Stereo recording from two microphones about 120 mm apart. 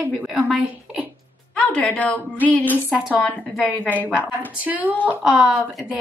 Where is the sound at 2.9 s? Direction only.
5° right (ahead or behind).